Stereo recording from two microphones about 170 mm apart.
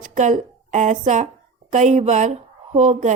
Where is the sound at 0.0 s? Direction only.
45° right (ahead or behind).